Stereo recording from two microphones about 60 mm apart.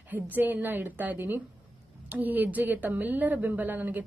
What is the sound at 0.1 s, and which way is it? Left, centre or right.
A woman's voice, right.